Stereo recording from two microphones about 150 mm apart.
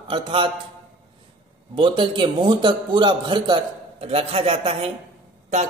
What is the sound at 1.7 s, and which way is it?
A man's voice, 35° right (ahead or behind).